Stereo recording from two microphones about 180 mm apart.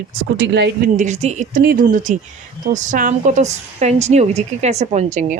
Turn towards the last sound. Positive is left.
turn(degrees=-40)  # may be behind; listen again after turning